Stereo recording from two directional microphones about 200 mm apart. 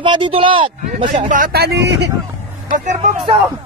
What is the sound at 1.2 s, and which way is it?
Speech, 45° right (ahead or behind).